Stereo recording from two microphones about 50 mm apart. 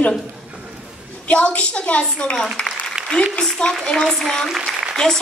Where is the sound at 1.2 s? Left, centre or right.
Left.